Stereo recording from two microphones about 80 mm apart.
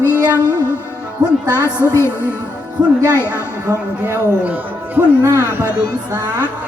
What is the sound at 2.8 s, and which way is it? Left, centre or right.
Speech, centre.